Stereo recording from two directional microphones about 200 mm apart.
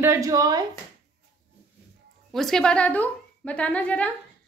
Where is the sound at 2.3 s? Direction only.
Centre (ahead or behind).